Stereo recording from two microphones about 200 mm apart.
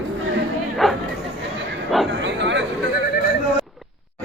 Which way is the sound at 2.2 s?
65° right (ahead or behind).